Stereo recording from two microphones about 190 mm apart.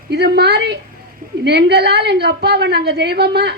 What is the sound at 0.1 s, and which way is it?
A woman's voice, 60° right (ahead or behind).